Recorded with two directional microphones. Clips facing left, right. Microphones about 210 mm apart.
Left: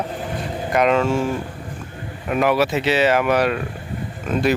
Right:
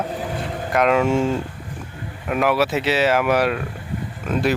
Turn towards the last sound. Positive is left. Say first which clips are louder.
# left 1 dB
turn(degrees=0)  # may be behind; listen again after turning